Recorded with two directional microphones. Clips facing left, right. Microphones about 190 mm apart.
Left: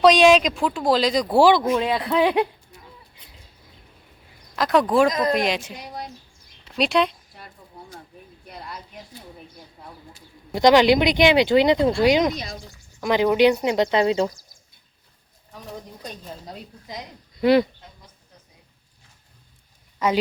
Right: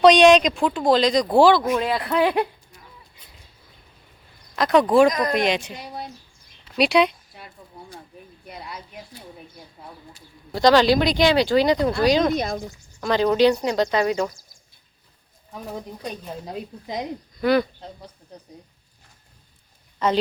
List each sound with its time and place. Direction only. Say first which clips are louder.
0.0 s speech: right 2 dB; centre (ahead or behind)
4.5 s speech: right 2 dB; centre (ahead or behind)
6.7 s a sound: right 2 dB; 5° right (ahead or behind)
7.7 s speech: even; centre (ahead or behind)
10.5 s speech: left 1 dB; 20° left (ahead or behind)
12.3 s speech: right 8 dB; 55° right (ahead or behind)
13.0 s speech: even; 15° left (ahead or behind)
16.8 s a woman's voice: right 7 dB; 20° right (ahead or behind)
17.3 s speech: left 3 dB; 25° left (ahead or behind)
18.3 s a sound: right 11 dB; 35° right (ahead or behind)
20.0 s speech: even; 10° left (ahead or behind)